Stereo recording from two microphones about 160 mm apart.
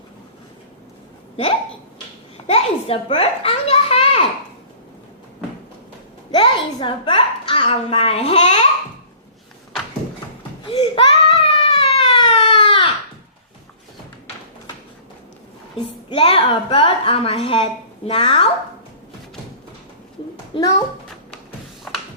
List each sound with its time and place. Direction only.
2.5 s a sound: 40° left (ahead or behind)
6.3 s a woman's voice: 30° left (ahead or behind)
10.7 s baby cry: 30° left (ahead or behind)
16.0 s a woman's voice: 35° left (ahead or behind)
20.6 s a child's voice: 20° left (ahead or behind)